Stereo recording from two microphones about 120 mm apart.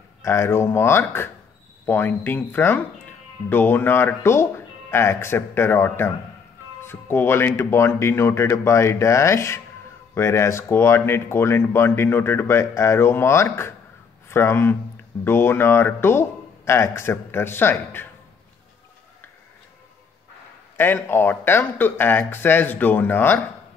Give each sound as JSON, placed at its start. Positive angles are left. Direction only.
{"t": 0.2, "sound": "speech", "side_deg": 20}
{"t": 20.7, "sound": "speech", "side_deg": 15}